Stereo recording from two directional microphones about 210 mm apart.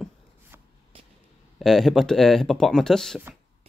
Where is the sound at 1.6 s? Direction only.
Centre (ahead or behind).